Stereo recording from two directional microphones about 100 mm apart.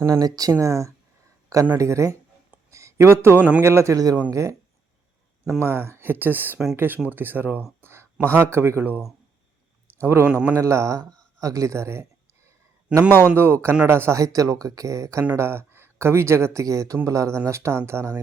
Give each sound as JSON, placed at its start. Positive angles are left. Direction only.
{"t": 0.0, "sound": "speech", "side_deg": -35}
{"t": 2.6, "sound": "a sound", "side_deg": -30}
{"t": 3.6, "sound": "speech", "side_deg": -25}
{"t": 5.5, "sound": "speech", "side_deg": -25}
{"t": 7.8, "sound": "a sound", "side_deg": -25}
{"t": 8.4, "sound": "speech", "side_deg": -25}
{"t": 10.0, "sound": "speech", "side_deg": -25}
{"t": 13.2, "sound": "speech", "side_deg": -20}